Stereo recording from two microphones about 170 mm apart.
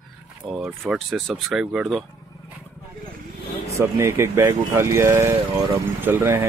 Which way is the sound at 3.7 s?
15° right (ahead or behind).